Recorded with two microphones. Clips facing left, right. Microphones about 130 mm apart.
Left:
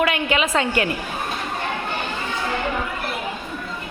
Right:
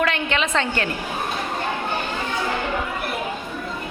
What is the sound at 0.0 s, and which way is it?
Speech, 10° left (ahead or behind).